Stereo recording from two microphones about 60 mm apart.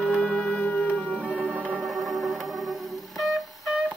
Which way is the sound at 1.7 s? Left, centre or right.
Centre.